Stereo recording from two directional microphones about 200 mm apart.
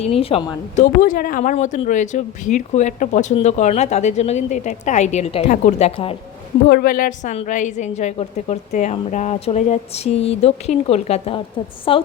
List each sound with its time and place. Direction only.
0.0 s speech: 30° left (ahead or behind)
1.0 s speech: 45° left (ahead or behind)
6.7 s speech: 45° left (ahead or behind); by 12.0 s 25° left (ahead or behind)